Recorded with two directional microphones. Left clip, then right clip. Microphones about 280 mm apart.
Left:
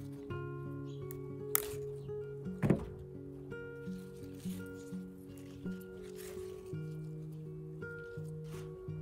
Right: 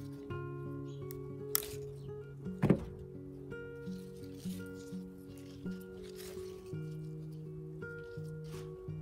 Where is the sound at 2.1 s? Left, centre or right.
Centre.